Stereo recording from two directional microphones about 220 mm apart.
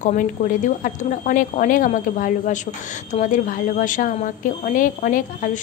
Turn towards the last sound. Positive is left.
turn(degrees=40)  # may be behind; listen again after turning